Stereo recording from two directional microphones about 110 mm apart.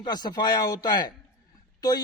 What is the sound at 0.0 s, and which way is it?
A man's voice, 40° left (ahead or behind).